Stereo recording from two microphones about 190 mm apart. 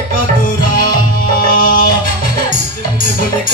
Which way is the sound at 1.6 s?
45° left (ahead or behind).